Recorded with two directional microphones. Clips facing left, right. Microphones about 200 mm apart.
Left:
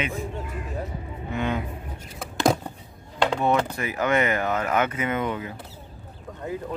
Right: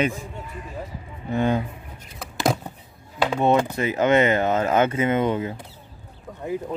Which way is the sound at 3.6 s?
20° right (ahead or behind).